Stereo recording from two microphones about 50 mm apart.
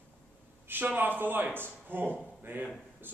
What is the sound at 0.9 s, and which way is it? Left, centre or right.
A man's voice, right.